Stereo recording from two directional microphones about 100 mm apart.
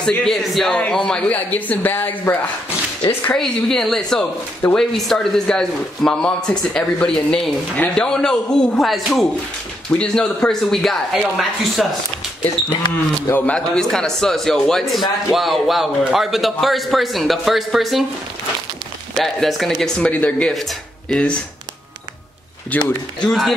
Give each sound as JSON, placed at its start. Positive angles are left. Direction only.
{"t": 0.0, "sound": "a man's voice", "side_deg": 5}
{"t": 3.3, "sound": "a man's voice", "side_deg": 5}
{"t": 9.8, "sound": "a man's voice", "side_deg": 10}
{"t": 13.3, "sound": "a man's voice", "side_deg": 10}
{"t": 19.1, "sound": "a man's voice", "side_deg": 0}
{"t": 20.0, "sound": "speech", "side_deg": 15}
{"t": 22.7, "sound": "speech", "side_deg": 15}
{"t": 23.2, "sound": "a man's voice", "side_deg": 5}